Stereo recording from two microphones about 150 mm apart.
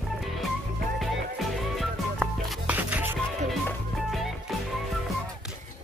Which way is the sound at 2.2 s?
10° right (ahead or behind).